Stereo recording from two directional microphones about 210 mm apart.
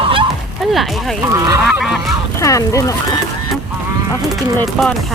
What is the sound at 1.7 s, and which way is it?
Speech, centre (ahead or behind).